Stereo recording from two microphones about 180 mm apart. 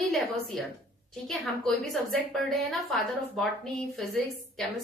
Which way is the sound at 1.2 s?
Centre (ahead or behind).